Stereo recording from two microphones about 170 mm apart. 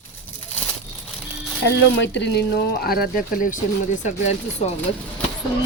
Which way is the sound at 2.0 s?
90° left.